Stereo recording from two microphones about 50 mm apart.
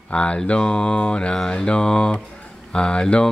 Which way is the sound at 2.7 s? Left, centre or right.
Centre.